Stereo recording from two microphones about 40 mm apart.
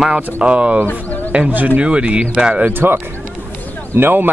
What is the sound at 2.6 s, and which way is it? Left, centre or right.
Speech, right.